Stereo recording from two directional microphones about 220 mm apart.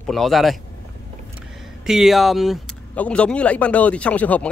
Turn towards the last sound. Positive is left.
turn(degrees=5)  # may be behind; listen again after turning